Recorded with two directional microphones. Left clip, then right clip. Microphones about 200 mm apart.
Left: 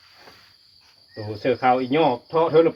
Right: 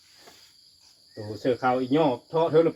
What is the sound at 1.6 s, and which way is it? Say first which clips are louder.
Cricket: left 5 dB; 15° left (ahead or behind).